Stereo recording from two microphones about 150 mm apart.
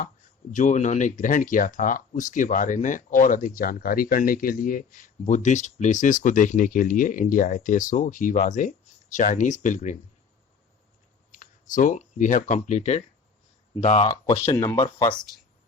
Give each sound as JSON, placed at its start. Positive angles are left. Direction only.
{"t": 0.5, "sound": "speech", "side_deg": 55}
{"t": 5.2, "sound": "speech", "side_deg": 55}
{"t": 11.3, "sound": "speech", "side_deg": 60}
{"t": 14.1, "sound": "speech", "side_deg": 25}